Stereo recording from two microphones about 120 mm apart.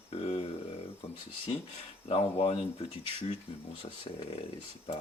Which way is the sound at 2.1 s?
50° left (ahead or behind).